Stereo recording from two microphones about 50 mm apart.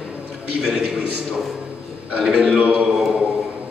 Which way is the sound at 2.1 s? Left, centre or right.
Centre.